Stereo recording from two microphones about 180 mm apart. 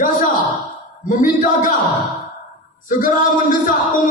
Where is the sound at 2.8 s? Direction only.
50° left (ahead or behind).